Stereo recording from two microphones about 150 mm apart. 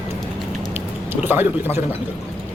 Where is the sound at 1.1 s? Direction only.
15° right (ahead or behind).